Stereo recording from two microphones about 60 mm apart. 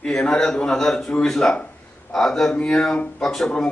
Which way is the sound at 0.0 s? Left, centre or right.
Centre.